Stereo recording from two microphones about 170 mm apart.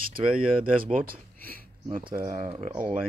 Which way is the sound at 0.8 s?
60° right (ahead or behind).